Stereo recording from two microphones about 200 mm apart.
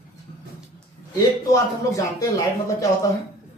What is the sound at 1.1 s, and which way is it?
A man's voice, 15° left (ahead or behind).